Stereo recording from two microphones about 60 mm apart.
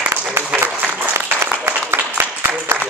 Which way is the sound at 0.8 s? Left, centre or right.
Right.